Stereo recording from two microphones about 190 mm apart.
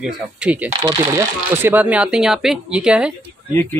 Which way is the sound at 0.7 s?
20° right (ahead or behind).